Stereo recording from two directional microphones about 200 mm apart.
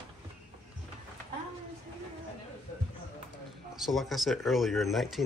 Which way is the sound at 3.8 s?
Centre (ahead or behind).